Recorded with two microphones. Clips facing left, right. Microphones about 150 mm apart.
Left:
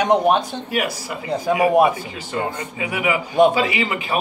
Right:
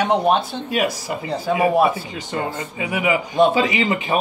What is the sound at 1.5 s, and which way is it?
Speech, 15° left (ahead or behind).